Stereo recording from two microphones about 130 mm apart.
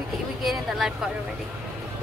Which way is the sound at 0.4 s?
Centre (ahead or behind).